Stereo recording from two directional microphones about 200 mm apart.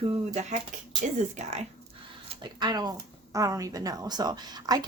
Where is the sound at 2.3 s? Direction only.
20° right (ahead or behind).